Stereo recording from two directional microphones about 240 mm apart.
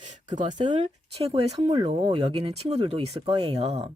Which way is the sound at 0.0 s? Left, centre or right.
Right.